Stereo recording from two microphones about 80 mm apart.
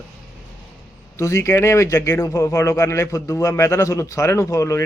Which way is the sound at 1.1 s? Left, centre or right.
Left.